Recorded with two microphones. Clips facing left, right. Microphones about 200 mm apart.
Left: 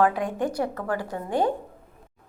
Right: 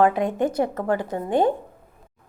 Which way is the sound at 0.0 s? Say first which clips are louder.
Right 3 dB; 20° right (ahead or behind).